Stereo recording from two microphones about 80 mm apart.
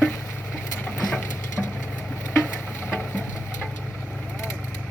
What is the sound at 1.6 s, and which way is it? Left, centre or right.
Vehicle, centre.